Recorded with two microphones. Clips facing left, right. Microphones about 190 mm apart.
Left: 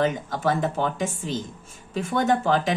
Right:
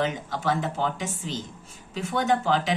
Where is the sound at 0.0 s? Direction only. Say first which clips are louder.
Left 4 dB; 50° left (ahead or behind).